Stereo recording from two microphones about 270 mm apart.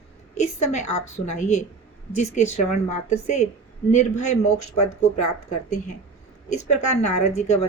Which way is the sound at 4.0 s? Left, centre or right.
Left.